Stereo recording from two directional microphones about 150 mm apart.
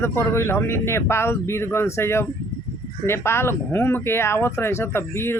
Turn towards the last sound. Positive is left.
turn(degrees=15)  # may be behind; listen again after turning